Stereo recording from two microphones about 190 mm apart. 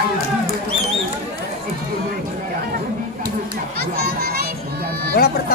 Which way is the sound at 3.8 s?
55° right (ahead or behind).